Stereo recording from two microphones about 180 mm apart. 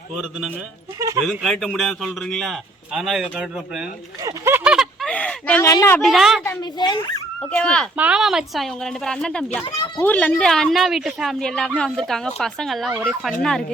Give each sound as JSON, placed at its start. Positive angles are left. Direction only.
{"t": 0.9, "sound": "speech", "side_deg": -15}
{"t": 1.2, "sound": "a man's voice", "side_deg": 0}
{"t": 4.2, "sound": "a sound", "side_deg": -15}
{"t": 6.0, "sound": "a man's voice", "side_deg": 0}
{"t": 6.4, "sound": "speech", "side_deg": 20}
{"t": 7.5, "sound": "a man's voice", "side_deg": 5}
{"t": 7.9, "sound": "a man's voice", "side_deg": -5}